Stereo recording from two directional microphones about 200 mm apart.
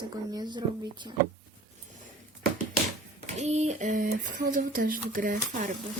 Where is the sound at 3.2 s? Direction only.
35° right (ahead or behind).